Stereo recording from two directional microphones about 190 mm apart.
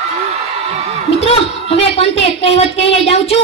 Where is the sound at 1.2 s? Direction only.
30° left (ahead or behind).